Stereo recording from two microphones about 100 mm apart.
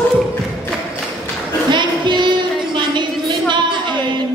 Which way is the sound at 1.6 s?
50° right (ahead or behind).